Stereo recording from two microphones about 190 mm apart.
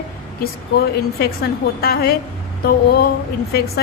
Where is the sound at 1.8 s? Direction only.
55° left (ahead or behind).